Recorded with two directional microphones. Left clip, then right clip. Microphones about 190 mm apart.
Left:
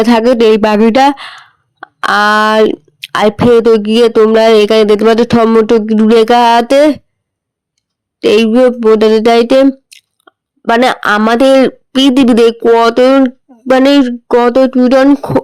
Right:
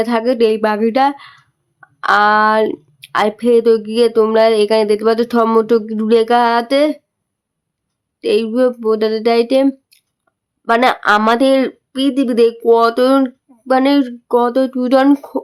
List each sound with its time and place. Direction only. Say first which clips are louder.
0.0 s speech: left 6 dB; 35° left (ahead or behind)
8.2 s speech: left 7 dB; 35° left (ahead or behind)
9.9 s chewing: left 15 dB; 35° left (ahead or behind)
11.3 s speech: left 6 dB; 35° left (ahead or behind)
12.5 s a sound: left 4 dB; 30° left (ahead or behind)